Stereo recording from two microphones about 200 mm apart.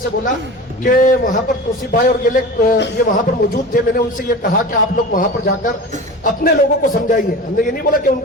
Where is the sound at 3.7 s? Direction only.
45° left (ahead or behind).